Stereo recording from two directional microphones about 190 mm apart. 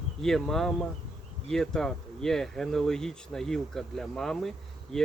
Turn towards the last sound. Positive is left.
turn(degrees=0)  # may be behind; listen again after turning